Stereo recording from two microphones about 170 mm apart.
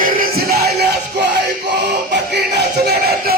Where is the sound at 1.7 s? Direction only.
90° right.